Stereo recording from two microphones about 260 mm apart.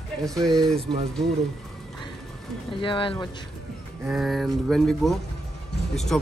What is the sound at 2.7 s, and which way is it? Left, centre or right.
Speech, centre.